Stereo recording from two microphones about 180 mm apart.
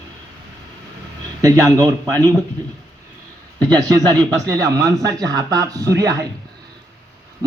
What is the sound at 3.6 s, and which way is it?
Speech, 20° right (ahead or behind).